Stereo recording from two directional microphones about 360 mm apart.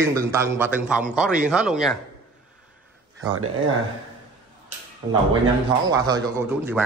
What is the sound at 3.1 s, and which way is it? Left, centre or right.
Speech, right.